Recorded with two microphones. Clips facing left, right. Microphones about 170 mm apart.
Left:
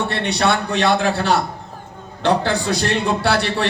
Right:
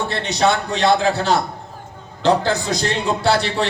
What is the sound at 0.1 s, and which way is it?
A man's voice, 65° left (ahead or behind).